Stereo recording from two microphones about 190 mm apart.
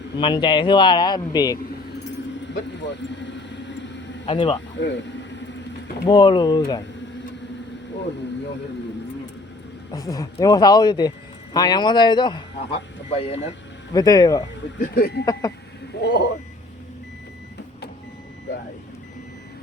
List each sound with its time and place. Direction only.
0.2 s speech: 25° left (ahead or behind)
2.5 s vehicle: 65° left (ahead or behind)
4.3 s speech: 30° left (ahead or behind)
4.8 s a man's voice: 70° left (ahead or behind)
6.1 s speech: 25° left (ahead or behind)
9.9 s speech: 20° left (ahead or behind)
13.9 s speech: 20° left (ahead or behind)
14.8 s speech: 50° left (ahead or behind)
15.2 s speech: 20° left (ahead or behind)
16.0 s a sound: 65° left (ahead or behind)